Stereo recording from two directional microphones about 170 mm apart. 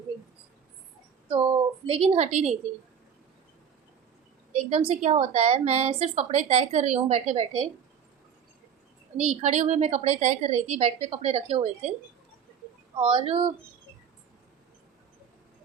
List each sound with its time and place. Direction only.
1.9 s a woman's voice: 35° right (ahead or behind)
4.5 s a woman's voice: 35° right (ahead or behind)
9.1 s a woman's voice: 40° right (ahead or behind)
13.0 s a woman's voice: 35° right (ahead or behind)